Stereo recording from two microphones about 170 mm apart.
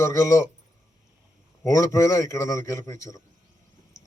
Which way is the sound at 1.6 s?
20° left (ahead or behind).